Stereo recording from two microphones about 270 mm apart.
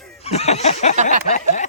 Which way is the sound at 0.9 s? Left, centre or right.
Right.